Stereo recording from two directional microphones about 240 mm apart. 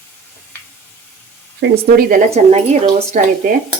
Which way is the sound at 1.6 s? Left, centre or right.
Right.